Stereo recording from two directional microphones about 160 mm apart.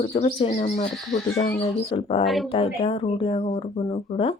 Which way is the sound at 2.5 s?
40° left (ahead or behind).